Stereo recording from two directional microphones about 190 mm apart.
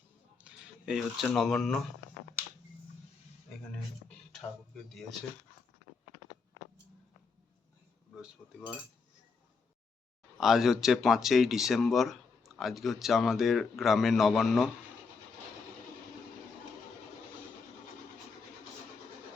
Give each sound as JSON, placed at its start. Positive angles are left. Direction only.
{"t": 0.3, "sound": "speech", "side_deg": -5}
{"t": 8.1, "sound": "speech", "side_deg": -5}
{"t": 10.3, "sound": "speech", "side_deg": 0}